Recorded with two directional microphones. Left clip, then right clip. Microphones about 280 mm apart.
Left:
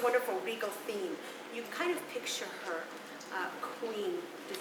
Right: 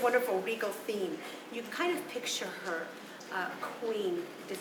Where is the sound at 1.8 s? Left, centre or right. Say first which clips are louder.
Right 2 dB; centre.